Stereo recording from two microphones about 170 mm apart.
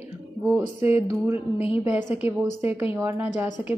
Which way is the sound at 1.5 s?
35° left (ahead or behind).